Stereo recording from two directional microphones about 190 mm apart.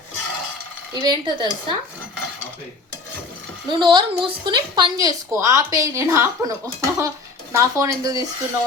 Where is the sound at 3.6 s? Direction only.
25° right (ahead or behind).